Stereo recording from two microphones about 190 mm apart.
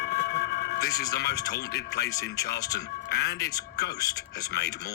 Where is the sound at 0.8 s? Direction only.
20° left (ahead or behind).